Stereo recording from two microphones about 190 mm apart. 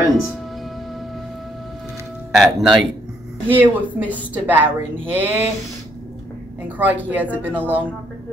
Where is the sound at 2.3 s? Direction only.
Centre (ahead or behind).